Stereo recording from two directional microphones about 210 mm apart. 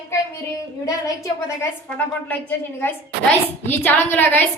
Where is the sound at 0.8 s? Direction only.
15° left (ahead or behind).